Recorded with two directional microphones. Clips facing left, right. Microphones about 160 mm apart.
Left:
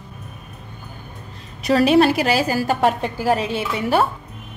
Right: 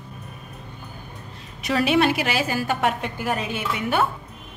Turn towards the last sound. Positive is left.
turn(degrees=30)  # may be behind; listen again after turning